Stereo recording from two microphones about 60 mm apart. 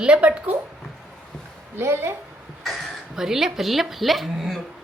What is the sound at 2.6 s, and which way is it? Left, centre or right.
A man's voice, centre.